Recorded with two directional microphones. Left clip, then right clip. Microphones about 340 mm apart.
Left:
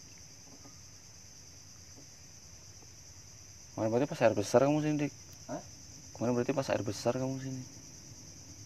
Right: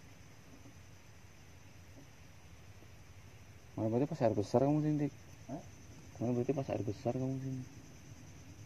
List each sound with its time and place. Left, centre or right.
3.7 s speech: centre
6.1 s speech: left